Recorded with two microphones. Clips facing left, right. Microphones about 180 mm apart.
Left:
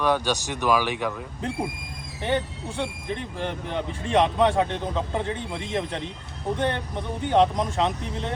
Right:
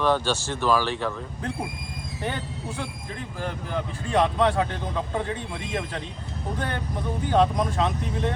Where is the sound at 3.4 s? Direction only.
25° left (ahead or behind).